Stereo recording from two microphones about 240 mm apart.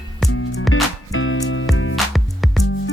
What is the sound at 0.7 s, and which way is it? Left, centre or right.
Music, left.